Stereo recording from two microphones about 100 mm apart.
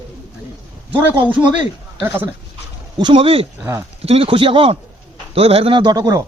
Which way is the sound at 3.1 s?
70° right (ahead or behind).